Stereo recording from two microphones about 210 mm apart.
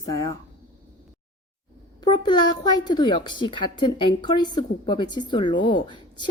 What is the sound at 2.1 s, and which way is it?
A woman's voice, 20° left (ahead or behind).